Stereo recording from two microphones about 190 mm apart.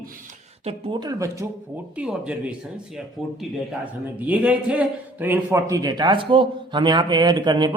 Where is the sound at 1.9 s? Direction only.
5° right (ahead or behind).